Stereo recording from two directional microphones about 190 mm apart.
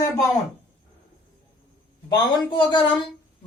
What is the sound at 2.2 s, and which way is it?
Speech, 25° left (ahead or behind).